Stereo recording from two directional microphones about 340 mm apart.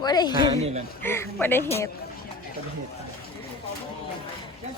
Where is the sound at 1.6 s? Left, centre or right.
Centre.